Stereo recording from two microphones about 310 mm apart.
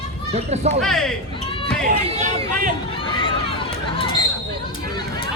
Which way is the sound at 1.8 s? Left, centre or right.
Right.